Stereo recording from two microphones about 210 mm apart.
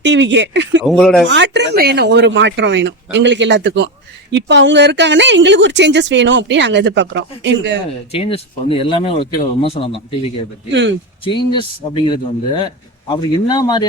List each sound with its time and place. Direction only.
0.0 s speech: 60° right (ahead or behind)
0.8 s speech: centre (ahead or behind)
1.3 s speech: 55° right (ahead or behind)
8.1 s speech: 25° left (ahead or behind)
10.7 s speech: 60° right (ahead or behind)
11.2 s speech: 25° left (ahead or behind)